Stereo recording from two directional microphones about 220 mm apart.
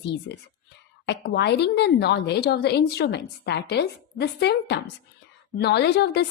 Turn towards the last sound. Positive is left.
turn(degrees=50)  # may be behind; listen again after turning